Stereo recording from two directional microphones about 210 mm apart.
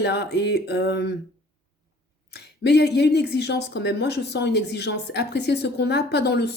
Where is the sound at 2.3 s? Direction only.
50° left (ahead or behind).